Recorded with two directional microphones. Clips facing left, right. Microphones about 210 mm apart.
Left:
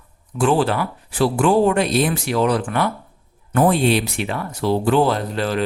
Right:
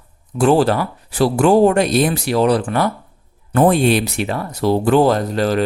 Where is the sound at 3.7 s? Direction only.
50° right (ahead or behind).